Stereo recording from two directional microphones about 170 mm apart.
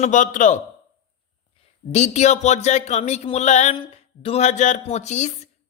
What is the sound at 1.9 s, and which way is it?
A man's voice, 40° left (ahead or behind).